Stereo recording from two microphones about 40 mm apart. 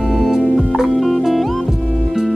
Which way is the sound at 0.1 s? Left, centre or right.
Centre.